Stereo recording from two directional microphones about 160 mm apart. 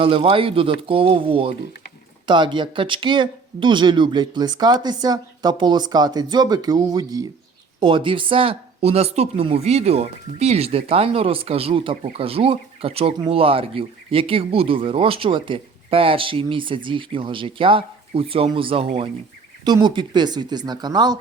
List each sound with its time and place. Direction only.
0.0 s speech: 35° right (ahead or behind)